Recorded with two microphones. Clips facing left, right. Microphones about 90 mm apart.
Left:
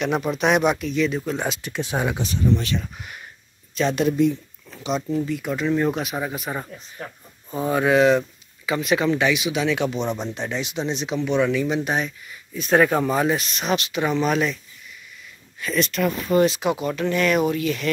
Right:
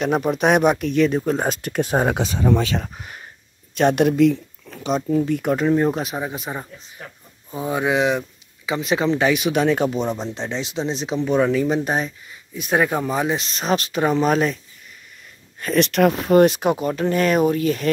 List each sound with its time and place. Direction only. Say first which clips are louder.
0.0 s speech: right 3 dB; 40° right (ahead or behind)
2.4 s speech: right 2 dB; 90° right
3.7 s speech: right 4 dB; 55° right (ahead or behind)
4.6 s speech: right 3 dB; 45° right (ahead or behind)
5.8 s speech: right 2 dB; 30° right (ahead or behind)
7.5 s speech: left 2 dB; 10° right (ahead or behind); by 9.3 s 30° right (ahead or behind)
9.3 s speech: right 4 dB; 50° right (ahead or behind)
10.0 s speech: right 1 dB; 25° right (ahead or behind)
12.5 s speech: left 2 dB; 15° right (ahead or behind)
13.4 s speech: right 2 dB; 30° right (ahead or behind)
15.6 s speech: right 6 dB; 60° right (ahead or behind)
16.8 s speech: right 2 dB; 40° right (ahead or behind)